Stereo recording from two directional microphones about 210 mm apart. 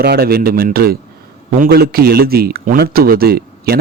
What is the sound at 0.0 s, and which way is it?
A man's voice, 50° right (ahead or behind).